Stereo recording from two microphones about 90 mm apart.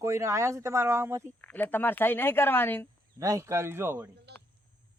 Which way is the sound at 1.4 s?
20° left (ahead or behind).